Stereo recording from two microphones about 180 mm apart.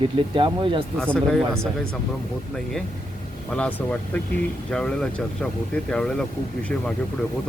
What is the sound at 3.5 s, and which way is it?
Speech, 5° left (ahead or behind).